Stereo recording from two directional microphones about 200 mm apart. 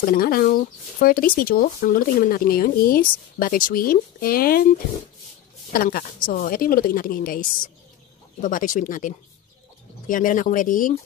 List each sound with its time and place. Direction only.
0.0 s speech: 45° left (ahead or behind)
5.7 s speech: 45° left (ahead or behind)